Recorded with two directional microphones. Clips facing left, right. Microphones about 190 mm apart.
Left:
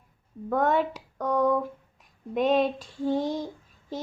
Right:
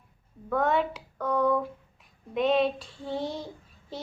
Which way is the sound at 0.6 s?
45° left (ahead or behind).